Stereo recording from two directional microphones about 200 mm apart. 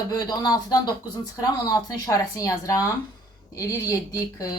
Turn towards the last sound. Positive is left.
turn(degrees=15)  # may be behind; listen again after turning